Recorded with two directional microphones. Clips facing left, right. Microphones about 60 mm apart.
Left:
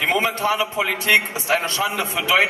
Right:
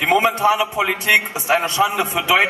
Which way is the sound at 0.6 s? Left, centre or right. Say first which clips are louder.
Right 2 dB; centre.